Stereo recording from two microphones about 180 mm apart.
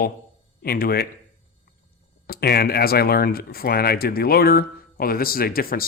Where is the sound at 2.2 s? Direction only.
60° left (ahead or behind).